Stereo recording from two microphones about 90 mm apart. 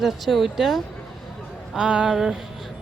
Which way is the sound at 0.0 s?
Centre (ahead or behind).